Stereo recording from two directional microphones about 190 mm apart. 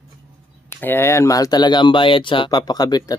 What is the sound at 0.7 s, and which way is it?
Speech, 10° left (ahead or behind).